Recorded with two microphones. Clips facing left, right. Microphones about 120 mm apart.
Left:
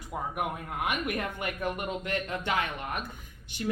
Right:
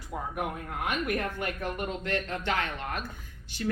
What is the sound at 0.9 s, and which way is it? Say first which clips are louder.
Speech: right 2 dB; 15° left (ahead or behind).